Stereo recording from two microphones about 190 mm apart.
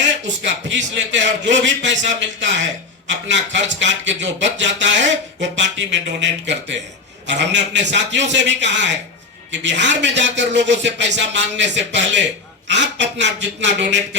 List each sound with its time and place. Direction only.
0.0 s a man's voice: 70° right (ahead or behind)